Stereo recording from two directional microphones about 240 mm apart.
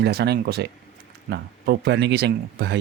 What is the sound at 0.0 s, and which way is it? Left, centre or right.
Speech, right.